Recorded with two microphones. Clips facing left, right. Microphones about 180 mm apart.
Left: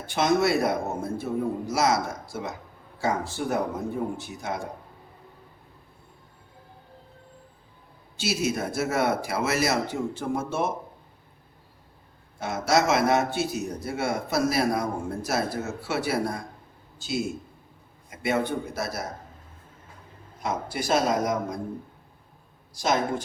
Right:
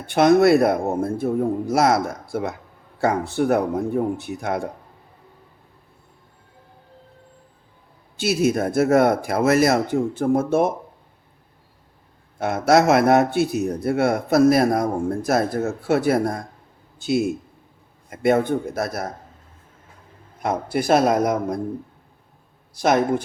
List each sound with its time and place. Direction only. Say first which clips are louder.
0.0 s a man's voice: right 8 dB; 60° right (ahead or behind)
8.1 s speech: right 7 dB; 55° right (ahead or behind)
12.4 s a man's voice: right 7 dB; 55° right (ahead or behind)
20.4 s a man's voice: right 7 dB; 55° right (ahead or behind)
22.7 s a man's voice: right 7 dB; 60° right (ahead or behind)